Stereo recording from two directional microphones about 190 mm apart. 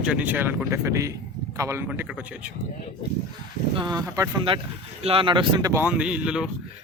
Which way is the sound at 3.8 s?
20° right (ahead or behind).